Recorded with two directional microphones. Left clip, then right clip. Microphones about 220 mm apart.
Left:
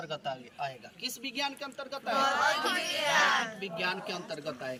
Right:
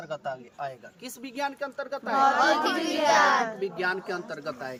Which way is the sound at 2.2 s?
40° right (ahead or behind).